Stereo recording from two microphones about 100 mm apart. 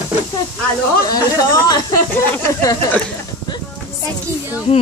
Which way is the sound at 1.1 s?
40° left (ahead or behind).